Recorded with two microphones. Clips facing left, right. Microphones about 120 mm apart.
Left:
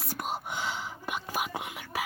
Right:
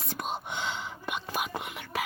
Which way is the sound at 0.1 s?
5° left (ahead or behind).